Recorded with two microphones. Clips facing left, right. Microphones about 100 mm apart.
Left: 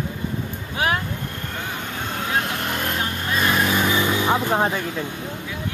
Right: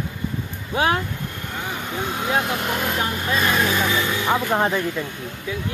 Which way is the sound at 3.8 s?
15° left (ahead or behind).